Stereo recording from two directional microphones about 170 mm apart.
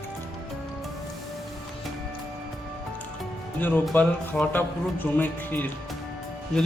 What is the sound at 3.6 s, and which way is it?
A man's voice, 10° left (ahead or behind).